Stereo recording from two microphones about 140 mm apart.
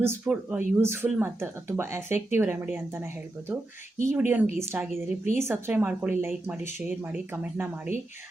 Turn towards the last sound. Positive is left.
turn(degrees=-10)  # may be behind; listen again after turning